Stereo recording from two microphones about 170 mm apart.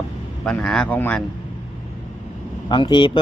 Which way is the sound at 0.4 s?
5° left (ahead or behind).